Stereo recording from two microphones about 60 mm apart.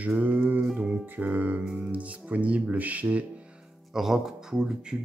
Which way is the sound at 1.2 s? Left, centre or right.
Right.